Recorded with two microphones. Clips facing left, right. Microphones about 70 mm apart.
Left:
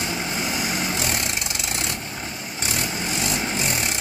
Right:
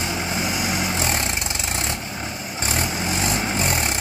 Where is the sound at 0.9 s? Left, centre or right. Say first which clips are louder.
Right 2 dB; right.